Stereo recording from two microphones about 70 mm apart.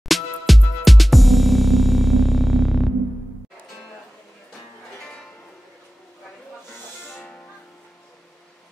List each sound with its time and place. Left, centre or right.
0.1 s music: centre
6.7 s music: centre